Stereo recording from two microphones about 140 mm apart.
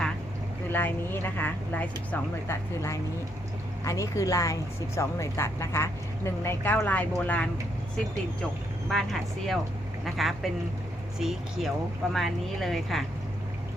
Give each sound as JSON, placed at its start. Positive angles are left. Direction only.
{"t": 0.7, "sound": "a woman's voice", "side_deg": 15}
{"t": 8.9, "sound": "speech", "side_deg": 0}